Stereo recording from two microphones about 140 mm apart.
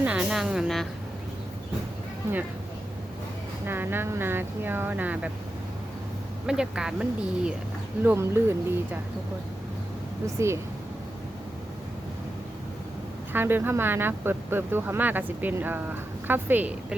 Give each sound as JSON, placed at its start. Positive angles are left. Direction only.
{"t": 0.0, "sound": "speech", "side_deg": -10}
{"t": 3.7, "sound": "speech", "side_deg": -15}
{"t": 6.4, "sound": "speech", "side_deg": -5}
{"t": 8.0, "sound": "speech", "side_deg": -20}
{"t": 10.3, "sound": "speech", "side_deg": -20}
{"t": 13.3, "sound": "speech", "side_deg": -15}